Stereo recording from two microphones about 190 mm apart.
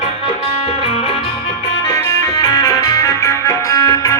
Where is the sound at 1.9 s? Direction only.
20° left (ahead or behind).